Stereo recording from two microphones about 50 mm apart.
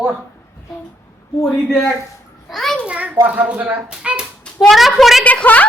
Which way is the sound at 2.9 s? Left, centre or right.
Right.